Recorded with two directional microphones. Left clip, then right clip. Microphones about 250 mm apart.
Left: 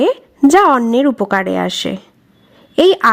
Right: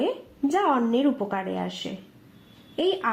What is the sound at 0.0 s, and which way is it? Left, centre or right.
Speech, left.